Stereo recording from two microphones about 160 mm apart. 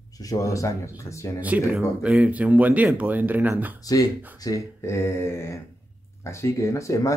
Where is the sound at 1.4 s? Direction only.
10° right (ahead or behind).